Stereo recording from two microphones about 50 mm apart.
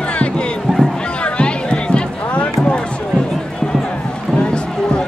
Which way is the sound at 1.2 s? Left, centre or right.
Left.